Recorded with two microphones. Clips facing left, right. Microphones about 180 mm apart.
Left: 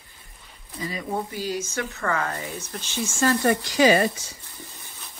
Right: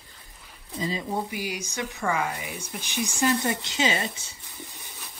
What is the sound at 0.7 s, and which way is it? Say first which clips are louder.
Speech: even; 25° right (ahead or behind).